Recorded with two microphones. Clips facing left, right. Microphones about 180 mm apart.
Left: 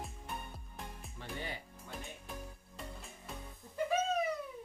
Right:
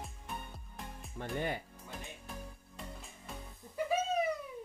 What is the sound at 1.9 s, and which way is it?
Music, centre (ahead or behind).